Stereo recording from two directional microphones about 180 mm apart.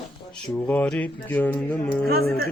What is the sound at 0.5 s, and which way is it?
Speech, 10° left (ahead or behind).